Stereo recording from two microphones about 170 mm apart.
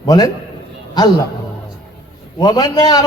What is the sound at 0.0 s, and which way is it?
Speech, 25° left (ahead or behind).